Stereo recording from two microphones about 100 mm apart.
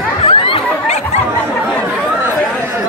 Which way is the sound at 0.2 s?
65° left (ahead or behind).